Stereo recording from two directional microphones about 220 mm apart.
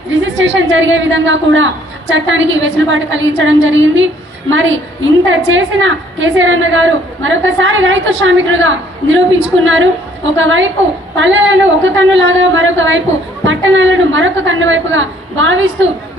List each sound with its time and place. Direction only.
0.1 s a woman's voice: 55° right (ahead or behind)
10.3 s a woman's voice: 60° right (ahead or behind)